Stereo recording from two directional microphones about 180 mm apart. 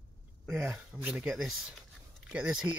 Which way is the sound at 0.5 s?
5° right (ahead or behind).